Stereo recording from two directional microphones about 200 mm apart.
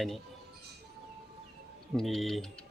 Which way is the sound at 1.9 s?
Centre (ahead or behind).